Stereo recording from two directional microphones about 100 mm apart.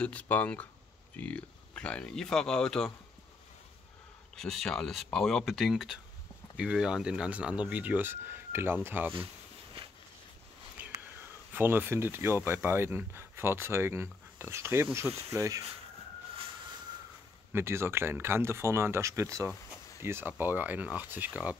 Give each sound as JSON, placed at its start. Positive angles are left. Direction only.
{"t": 0.0, "sound": "speech", "side_deg": 15}
{"t": 4.4, "sound": "speech", "side_deg": 5}
{"t": 10.8, "sound": "whispering", "side_deg": -20}
{"t": 11.5, "sound": "speech", "side_deg": -20}
{"t": 16.3, "sound": "a sound", "side_deg": -55}
{"t": 17.5, "sound": "speech", "side_deg": -25}